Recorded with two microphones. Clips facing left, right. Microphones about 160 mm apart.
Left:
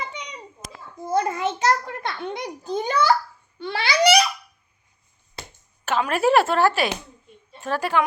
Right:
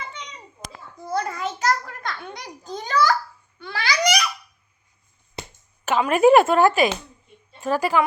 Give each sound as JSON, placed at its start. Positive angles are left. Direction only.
{"t": 1.0, "sound": "a sound", "side_deg": 20}
{"t": 3.6, "sound": "babbling", "side_deg": 25}
{"t": 5.4, "sound": "chop", "side_deg": -10}
{"t": 7.6, "sound": "a woman's voice", "side_deg": -10}